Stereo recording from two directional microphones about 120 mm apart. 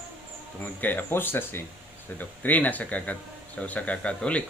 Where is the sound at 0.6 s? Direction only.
15° left (ahead or behind).